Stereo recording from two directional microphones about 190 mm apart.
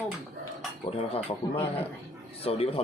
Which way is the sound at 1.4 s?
15° left (ahead or behind).